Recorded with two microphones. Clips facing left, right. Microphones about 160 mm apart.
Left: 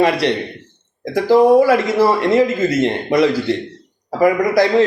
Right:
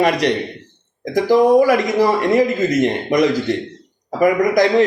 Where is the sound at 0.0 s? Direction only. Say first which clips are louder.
Left 1 dB; 15° right (ahead or behind).